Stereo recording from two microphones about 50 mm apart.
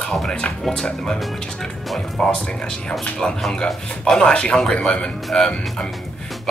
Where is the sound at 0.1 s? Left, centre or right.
Centre.